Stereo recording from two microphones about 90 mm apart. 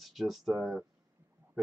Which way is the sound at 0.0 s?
Centre (ahead or behind).